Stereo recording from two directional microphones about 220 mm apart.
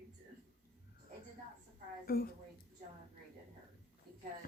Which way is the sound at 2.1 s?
40° left (ahead or behind).